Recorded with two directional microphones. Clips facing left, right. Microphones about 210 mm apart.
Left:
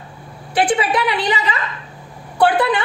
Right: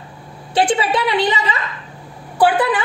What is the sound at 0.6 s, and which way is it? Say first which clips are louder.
Speech: even; 25° right (ahead or behind).